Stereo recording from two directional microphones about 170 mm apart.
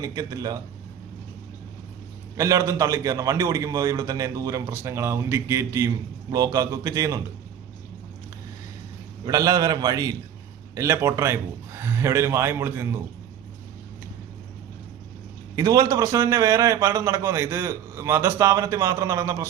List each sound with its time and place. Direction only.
0.0 s a man's voice: 20° right (ahead or behind)
2.3 s a man's voice: 20° right (ahead or behind)
9.2 s a man's voice: 20° right (ahead or behind)
15.5 s a man's voice: 20° right (ahead or behind)